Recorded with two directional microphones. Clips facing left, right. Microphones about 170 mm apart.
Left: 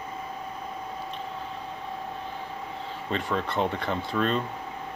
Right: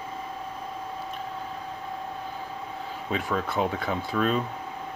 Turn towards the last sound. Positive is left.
turn(degrees=-5)  # may be behind; listen again after turning